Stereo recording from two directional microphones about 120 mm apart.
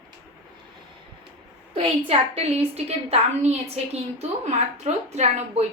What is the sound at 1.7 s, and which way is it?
A woman's voice, 50° right (ahead or behind).